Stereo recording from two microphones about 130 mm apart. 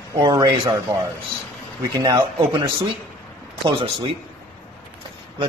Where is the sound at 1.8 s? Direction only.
30° right (ahead or behind).